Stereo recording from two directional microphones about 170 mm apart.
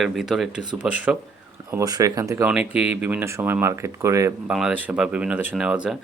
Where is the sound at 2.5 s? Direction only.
5° right (ahead or behind).